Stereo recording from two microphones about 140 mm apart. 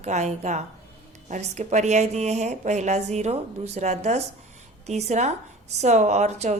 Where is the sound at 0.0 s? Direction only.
55° right (ahead or behind).